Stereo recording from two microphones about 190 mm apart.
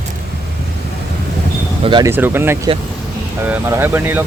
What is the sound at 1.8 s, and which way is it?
Speech, 25° right (ahead or behind).